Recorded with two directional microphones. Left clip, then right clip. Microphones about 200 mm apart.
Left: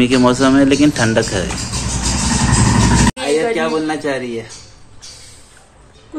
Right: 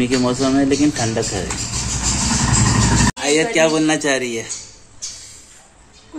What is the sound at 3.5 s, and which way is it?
Speech, 45° right (ahead or behind).